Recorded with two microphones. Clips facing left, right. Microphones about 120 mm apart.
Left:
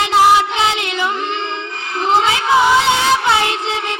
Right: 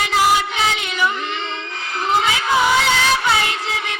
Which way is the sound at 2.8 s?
25° left (ahead or behind).